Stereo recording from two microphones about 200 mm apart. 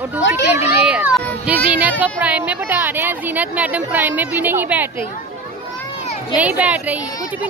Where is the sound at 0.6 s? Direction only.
5° right (ahead or behind).